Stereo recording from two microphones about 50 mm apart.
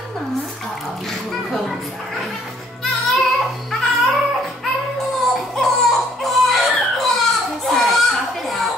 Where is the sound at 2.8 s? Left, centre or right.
Centre.